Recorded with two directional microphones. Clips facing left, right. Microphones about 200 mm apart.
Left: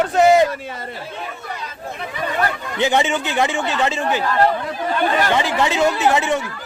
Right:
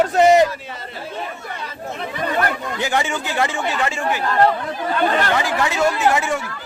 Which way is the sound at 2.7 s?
20° left (ahead or behind).